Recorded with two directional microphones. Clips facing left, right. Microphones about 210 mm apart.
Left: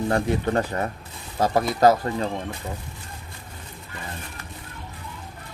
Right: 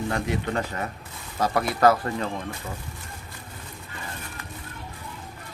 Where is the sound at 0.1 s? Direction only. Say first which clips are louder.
Left 7 dB; 35° left (ahead or behind).